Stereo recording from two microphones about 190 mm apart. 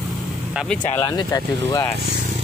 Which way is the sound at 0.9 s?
20° left (ahead or behind).